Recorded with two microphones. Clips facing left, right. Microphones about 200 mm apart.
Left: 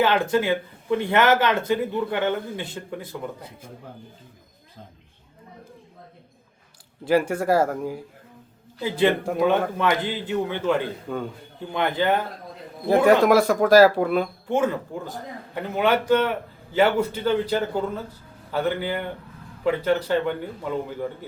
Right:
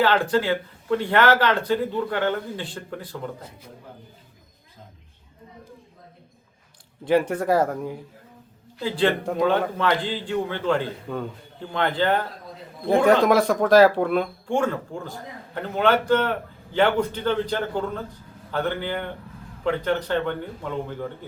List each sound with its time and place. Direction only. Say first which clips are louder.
0.0 s a man's voice: even; 20° left (ahead or behind)
3.1 s a man's voice: even; 10° left (ahead or behind)
7.0 s speech: even; 10° left (ahead or behind)
9.0 s a man's voice: left 1 dB; 10° left (ahead or behind)